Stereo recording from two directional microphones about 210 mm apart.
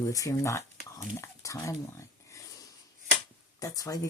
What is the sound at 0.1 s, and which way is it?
Speech, 15° left (ahead or behind).